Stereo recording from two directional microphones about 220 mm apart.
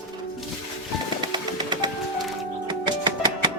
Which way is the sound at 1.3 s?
20° right (ahead or behind).